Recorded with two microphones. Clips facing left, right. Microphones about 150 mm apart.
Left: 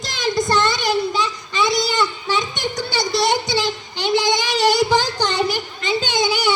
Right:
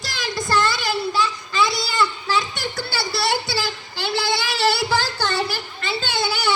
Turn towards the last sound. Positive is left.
turn(degrees=15)  # may be behind; listen again after turning